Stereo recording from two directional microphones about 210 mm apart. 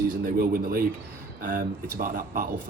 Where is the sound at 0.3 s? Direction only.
40° right (ahead or behind).